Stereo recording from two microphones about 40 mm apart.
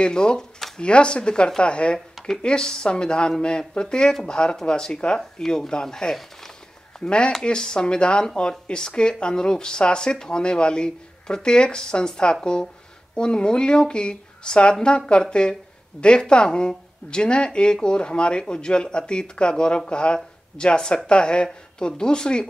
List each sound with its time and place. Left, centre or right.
0.0 s speech: left